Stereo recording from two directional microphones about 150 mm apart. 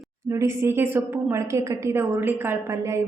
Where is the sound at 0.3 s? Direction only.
20° right (ahead or behind).